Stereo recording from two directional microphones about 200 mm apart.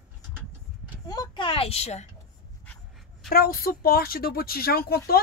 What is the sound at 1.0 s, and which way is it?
Speech, 20° left (ahead or behind).